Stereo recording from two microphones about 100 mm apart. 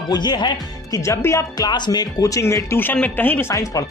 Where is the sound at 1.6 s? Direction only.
45° left (ahead or behind); by 2.7 s 30° left (ahead or behind).